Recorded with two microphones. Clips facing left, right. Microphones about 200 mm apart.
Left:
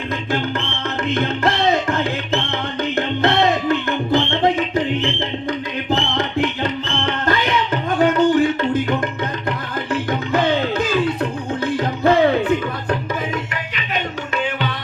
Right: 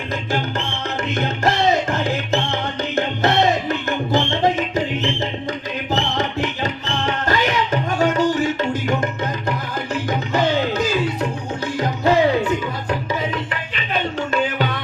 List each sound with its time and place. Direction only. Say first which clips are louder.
1.1 s music: left 1 dB; 55° left (ahead or behind)